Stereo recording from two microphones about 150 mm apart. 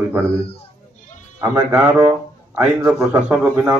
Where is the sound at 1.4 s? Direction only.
15° right (ahead or behind).